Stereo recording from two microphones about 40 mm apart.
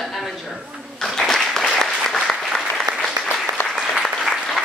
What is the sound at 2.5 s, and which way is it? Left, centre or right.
Applause, left.